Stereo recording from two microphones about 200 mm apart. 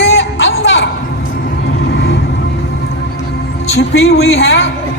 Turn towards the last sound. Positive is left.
turn(degrees=65)  # may be behind; listen again after turning